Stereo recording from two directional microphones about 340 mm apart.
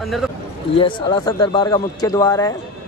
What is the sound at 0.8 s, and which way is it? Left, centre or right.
Speech, centre.